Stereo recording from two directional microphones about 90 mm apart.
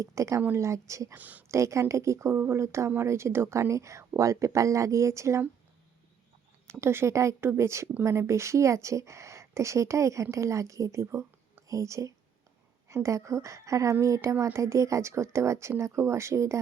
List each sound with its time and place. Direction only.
0.0 s speech: 35° right (ahead or behind)
1.1 s speech: 20° right (ahead or behind)
1.5 s speech: 35° right (ahead or behind)
6.7 s speech: 30° right (ahead or behind)